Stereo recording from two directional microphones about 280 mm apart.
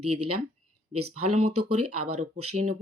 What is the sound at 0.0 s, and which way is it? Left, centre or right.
Speech, right.